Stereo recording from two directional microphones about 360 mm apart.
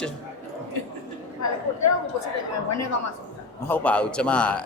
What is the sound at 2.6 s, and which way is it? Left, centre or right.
Speech, left.